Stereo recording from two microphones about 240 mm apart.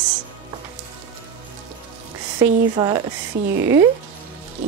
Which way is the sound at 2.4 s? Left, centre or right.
Centre.